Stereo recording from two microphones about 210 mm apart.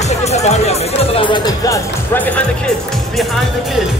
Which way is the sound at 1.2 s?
20° left (ahead or behind).